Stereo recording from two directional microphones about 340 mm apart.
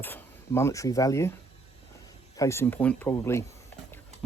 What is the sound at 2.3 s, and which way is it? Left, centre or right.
Speech, centre.